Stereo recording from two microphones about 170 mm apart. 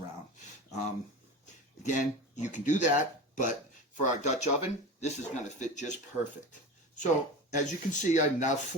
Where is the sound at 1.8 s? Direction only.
45° left (ahead or behind).